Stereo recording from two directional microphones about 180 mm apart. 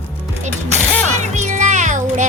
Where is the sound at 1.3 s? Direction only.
40° right (ahead or behind).